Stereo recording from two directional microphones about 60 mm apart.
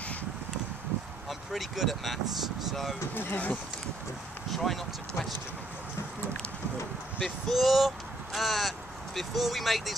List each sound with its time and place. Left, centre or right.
1.5 s speech: centre
3.2 s speech: left
4.5 s speech: centre
7.2 s speech: centre